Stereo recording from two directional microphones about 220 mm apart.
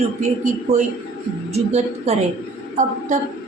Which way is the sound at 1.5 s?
30° right (ahead or behind).